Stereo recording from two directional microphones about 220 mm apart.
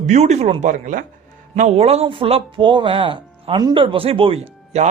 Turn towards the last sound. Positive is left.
turn(degrees=-30)  # may be behind; listen again after turning